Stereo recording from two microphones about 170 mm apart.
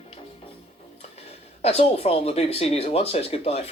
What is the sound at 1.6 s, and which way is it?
Speech, 35° left (ahead or behind).